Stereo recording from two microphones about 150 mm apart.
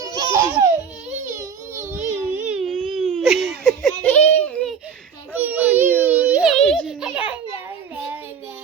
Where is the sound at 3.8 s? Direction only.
10° left (ahead or behind).